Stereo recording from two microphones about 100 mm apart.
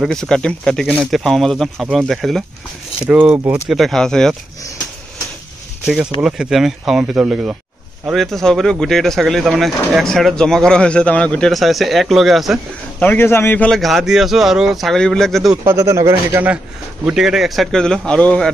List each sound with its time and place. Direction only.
0.1 s speech: 5° left (ahead or behind)
3.0 s speech: 15° right (ahead or behind)
3.6 s speech: centre (ahead or behind)
5.9 s speech: 10° right (ahead or behind)
13.0 s speech: 20° left (ahead or behind)
13.7 s speech: centre (ahead or behind)
15.6 s speech: 30° right (ahead or behind)
17.0 s speech: 5° right (ahead or behind); by 18.5 s 10° left (ahead or behind)